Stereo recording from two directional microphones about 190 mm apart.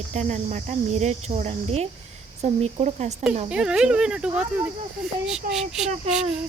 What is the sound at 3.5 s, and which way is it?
Speech, 5° right (ahead or behind).